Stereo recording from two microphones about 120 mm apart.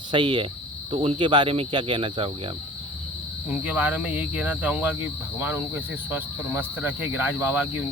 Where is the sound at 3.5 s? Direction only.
10° right (ahead or behind).